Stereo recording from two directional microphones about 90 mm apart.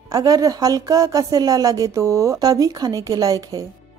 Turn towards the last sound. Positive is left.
turn(degrees=-40)  # may be behind; listen again after turning